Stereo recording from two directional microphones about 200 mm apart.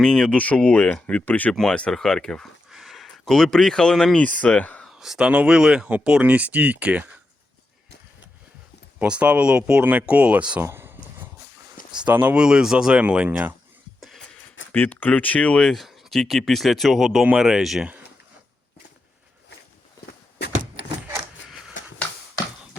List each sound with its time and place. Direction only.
0.0 s speech: 5° left (ahead or behind)
9.0 s speech: 5° right (ahead or behind)
14.2 s a sound: 70° left (ahead or behind)
14.7 s speech: 10° left (ahead or behind)